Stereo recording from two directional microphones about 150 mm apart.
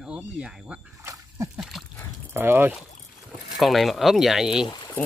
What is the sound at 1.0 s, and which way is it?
Dog, 20° right (ahead or behind).